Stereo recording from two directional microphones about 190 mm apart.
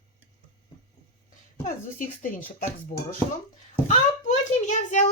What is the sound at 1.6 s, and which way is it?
Speech, 45° left (ahead or behind).